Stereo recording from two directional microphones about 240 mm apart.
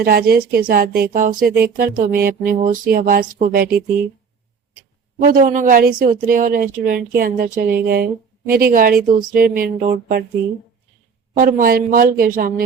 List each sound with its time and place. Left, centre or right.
0.0 s speech: right
5.2 s speech: right
11.3 s speech: right